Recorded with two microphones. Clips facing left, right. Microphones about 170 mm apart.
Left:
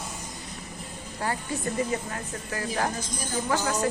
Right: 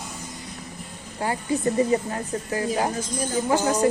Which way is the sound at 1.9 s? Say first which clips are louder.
Right 7 dB; 25° right (ahead or behind).